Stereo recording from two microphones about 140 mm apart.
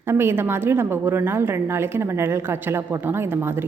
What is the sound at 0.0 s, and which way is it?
A woman's voice, 15° right (ahead or behind).